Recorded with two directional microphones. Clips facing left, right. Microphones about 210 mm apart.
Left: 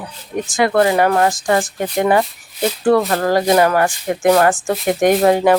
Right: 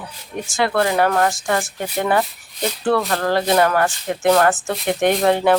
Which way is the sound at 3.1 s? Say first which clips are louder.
Left 3 dB; 15° left (ahead or behind).